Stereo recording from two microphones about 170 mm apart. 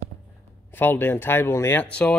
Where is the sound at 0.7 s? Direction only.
10° left (ahead or behind).